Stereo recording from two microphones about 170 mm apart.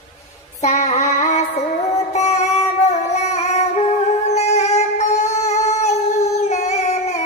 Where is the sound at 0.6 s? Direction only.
45° left (ahead or behind).